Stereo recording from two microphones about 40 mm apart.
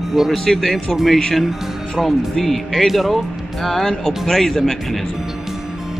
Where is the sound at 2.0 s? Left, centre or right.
Centre.